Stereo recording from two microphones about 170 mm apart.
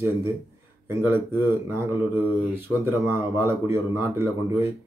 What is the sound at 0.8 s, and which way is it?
Speech, 15° right (ahead or behind).